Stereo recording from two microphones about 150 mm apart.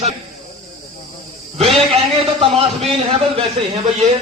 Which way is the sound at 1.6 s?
40° right (ahead or behind).